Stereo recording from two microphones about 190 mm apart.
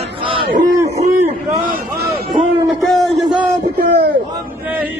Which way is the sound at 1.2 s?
50° right (ahead or behind).